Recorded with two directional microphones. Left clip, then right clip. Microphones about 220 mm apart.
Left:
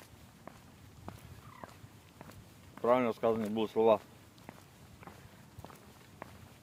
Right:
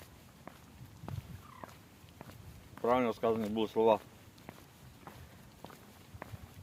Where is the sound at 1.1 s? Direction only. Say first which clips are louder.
Right 1 dB; 5° left (ahead or behind).